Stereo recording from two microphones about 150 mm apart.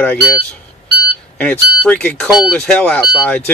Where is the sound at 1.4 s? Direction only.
10° left (ahead or behind).